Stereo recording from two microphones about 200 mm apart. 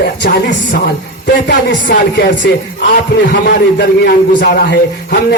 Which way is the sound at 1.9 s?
60° left (ahead or behind).